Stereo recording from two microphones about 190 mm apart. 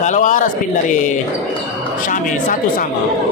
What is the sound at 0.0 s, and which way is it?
Speech, 40° left (ahead or behind).